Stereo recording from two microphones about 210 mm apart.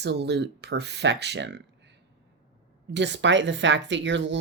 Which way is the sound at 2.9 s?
55° right (ahead or behind).